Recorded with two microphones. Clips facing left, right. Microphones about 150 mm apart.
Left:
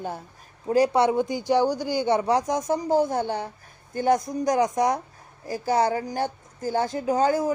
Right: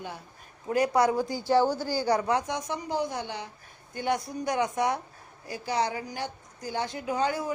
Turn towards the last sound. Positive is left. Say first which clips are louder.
# left 7 dB
turn(degrees=40)  # may be behind; listen again after turning